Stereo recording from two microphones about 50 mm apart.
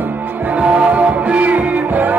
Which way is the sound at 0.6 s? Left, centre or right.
Right.